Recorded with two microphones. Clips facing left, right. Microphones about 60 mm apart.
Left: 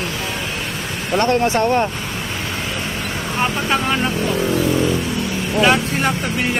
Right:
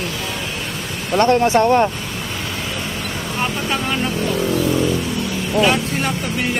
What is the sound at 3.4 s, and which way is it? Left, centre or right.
Speech, left.